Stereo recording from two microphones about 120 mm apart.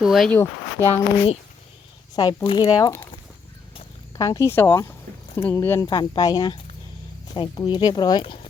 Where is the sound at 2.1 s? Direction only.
35° left (ahead or behind).